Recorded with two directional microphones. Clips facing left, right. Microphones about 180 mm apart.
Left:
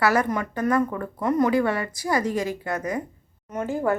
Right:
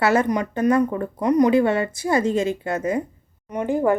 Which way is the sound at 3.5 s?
15° right (ahead or behind).